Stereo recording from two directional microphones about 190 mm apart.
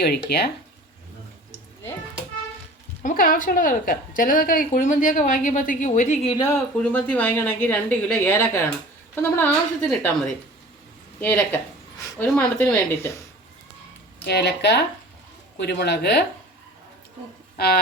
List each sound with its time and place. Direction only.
0.3 s speech: 55° left (ahead or behind)
3.0 s a woman's voice: 45° left (ahead or behind)
6.3 s speech: 15° left (ahead or behind)
6.7 s speech: 5° left (ahead or behind)
14.3 s speech: 60° left (ahead or behind)